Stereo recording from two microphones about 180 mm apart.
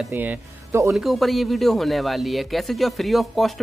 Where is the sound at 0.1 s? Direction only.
10° right (ahead or behind).